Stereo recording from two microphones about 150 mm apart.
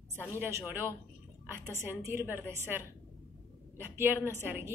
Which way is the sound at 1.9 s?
15° right (ahead or behind).